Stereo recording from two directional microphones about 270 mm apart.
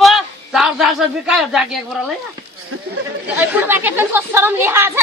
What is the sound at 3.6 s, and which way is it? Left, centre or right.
Speech, centre.